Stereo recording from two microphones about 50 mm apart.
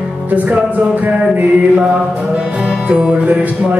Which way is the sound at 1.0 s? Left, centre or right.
Right.